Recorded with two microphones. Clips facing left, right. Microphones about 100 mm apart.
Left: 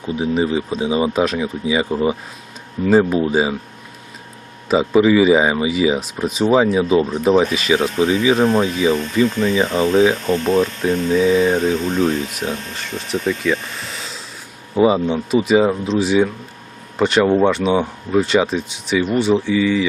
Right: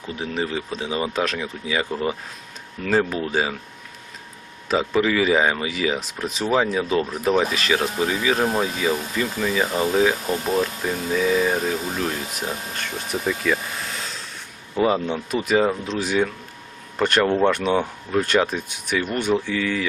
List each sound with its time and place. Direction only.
0.0 s speech: 15° left (ahead or behind)
4.7 s speech: 10° left (ahead or behind)
8.1 s speech: centre (ahead or behind)
14.8 s speech: 10° left (ahead or behind)
18.4 s speech: 5° right (ahead or behind)
19.1 s speech: 5° left (ahead or behind)